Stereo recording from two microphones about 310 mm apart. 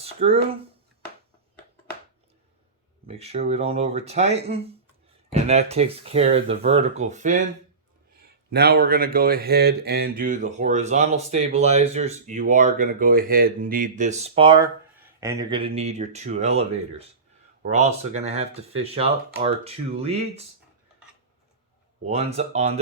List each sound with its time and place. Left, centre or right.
0.0 s speech: centre
3.1 s speech: centre
8.4 s speech: right
22.0 s speech: centre